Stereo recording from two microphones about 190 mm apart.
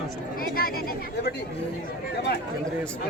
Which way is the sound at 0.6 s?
50° left (ahead or behind).